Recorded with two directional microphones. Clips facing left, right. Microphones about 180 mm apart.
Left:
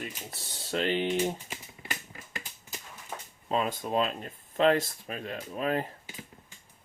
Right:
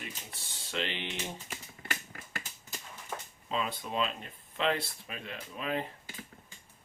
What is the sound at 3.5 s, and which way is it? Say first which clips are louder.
Speech: left 6 dB; 45° left (ahead or behind).